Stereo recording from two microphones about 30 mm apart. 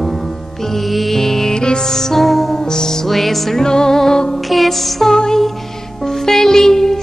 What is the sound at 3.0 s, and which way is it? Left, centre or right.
Music, centre.